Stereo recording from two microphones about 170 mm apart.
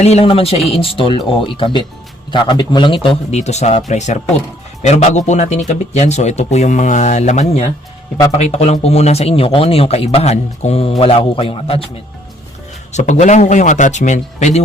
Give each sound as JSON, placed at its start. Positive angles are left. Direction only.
{"t": 0.0, "sound": "speech", "side_deg": 35}
{"t": 12.9, "sound": "speech", "side_deg": 45}